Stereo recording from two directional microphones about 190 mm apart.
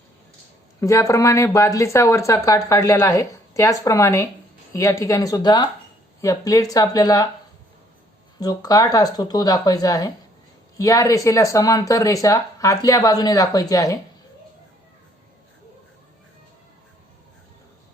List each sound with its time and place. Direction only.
0.8 s speech: 15° left (ahead or behind)
8.4 s speech: 20° left (ahead or behind)